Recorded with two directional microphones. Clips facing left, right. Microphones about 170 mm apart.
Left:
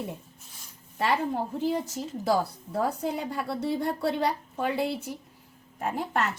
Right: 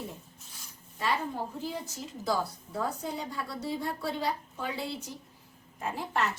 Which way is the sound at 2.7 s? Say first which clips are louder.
Left 5 dB; 60° left (ahead or behind).